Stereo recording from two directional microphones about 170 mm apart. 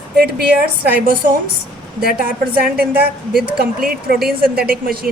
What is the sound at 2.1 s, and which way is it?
Speech, 60° right (ahead or behind).